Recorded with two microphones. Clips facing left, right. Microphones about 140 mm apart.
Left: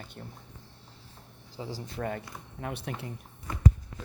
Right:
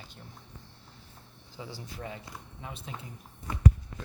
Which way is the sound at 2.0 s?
55° left (ahead or behind).